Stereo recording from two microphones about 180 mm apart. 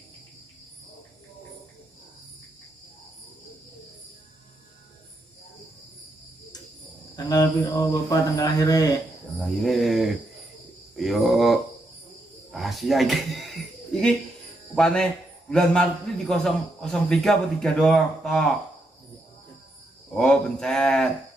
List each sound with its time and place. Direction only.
7.2 s speech: 20° left (ahead or behind)
9.4 s a man's voice: centre (ahead or behind)
12.4 s a sound: centre (ahead or behind)
14.8 s a man's voice: 5° left (ahead or behind)
20.2 s a man's voice: 5° left (ahead or behind)